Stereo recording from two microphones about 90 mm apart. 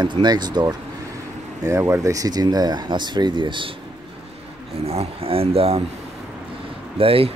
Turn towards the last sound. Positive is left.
turn(degrees=-90)